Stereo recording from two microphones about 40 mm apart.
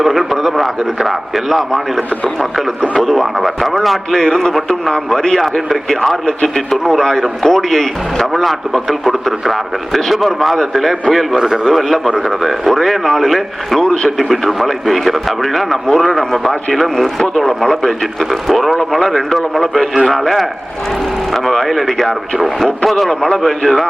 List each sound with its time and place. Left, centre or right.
0.0 s speech: centre
2.9 s speech: centre
5.4 s speech: centre
11.3 s a man's voice: centre
11.7 s speech: centre
13.8 s speech: left
14.2 s speech: centre